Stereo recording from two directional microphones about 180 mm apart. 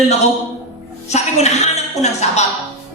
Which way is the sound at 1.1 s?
40° left (ahead or behind).